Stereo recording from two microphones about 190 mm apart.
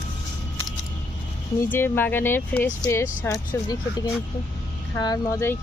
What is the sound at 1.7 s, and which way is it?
Speech, 10° left (ahead or behind).